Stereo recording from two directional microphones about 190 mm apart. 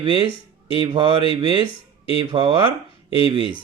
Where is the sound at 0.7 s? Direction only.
30° left (ahead or behind).